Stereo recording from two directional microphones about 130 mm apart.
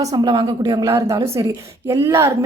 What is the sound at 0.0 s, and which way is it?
A woman's voice, 30° right (ahead or behind).